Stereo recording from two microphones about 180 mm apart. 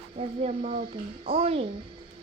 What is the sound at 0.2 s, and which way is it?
A child's voice, 40° right (ahead or behind).